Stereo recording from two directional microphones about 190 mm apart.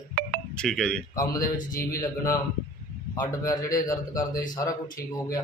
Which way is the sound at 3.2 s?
15° left (ahead or behind).